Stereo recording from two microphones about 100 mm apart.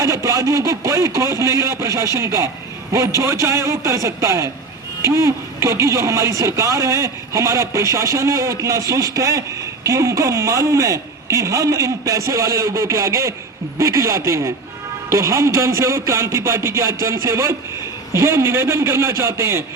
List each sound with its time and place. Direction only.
0.0 s speech: 35° right (ahead or behind)